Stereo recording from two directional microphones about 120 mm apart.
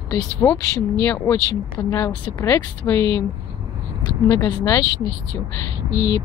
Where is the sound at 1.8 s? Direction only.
35° left (ahead or behind).